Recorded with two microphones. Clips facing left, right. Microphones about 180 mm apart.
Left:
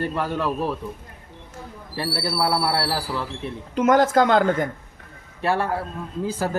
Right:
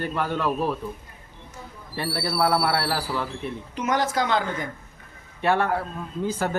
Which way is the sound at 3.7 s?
50° left (ahead or behind).